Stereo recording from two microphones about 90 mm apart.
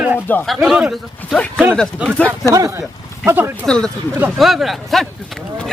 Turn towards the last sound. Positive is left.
turn(degrees=0)  # may be behind; listen again after turning